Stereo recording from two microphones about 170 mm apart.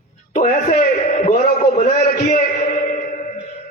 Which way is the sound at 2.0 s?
65° left (ahead or behind).